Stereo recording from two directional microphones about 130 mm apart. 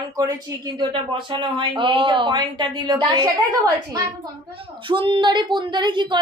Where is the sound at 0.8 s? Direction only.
40° right (ahead or behind).